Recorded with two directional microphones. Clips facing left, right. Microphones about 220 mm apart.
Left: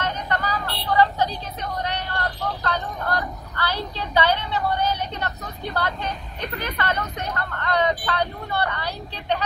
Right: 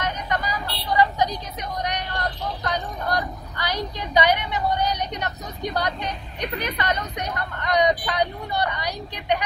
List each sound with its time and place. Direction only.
0.0 s speech: 15° right (ahead or behind)